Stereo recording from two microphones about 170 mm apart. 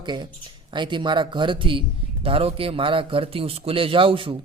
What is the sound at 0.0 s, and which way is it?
Speech, 25° right (ahead or behind).